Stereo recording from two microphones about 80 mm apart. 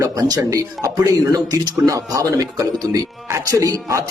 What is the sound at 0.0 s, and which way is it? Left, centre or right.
A man's voice, right.